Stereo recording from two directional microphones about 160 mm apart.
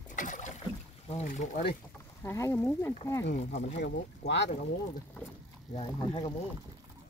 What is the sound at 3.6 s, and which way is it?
Speech, 90° left.